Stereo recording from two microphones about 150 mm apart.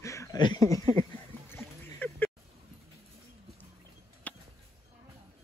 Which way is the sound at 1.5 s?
10° left (ahead or behind).